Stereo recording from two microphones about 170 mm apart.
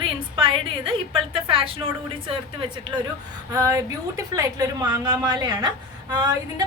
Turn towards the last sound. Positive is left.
turn(degrees=-25)  # may be behind; listen again after turning